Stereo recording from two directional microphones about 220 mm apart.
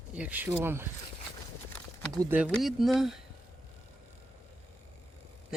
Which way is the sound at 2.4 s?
Centre (ahead or behind).